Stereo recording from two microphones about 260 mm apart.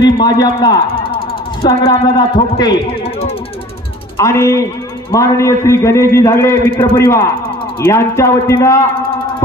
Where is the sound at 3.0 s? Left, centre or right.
Left.